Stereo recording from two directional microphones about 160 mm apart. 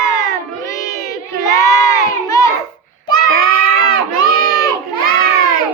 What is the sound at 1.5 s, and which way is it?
Crowd, 20° left (ahead or behind).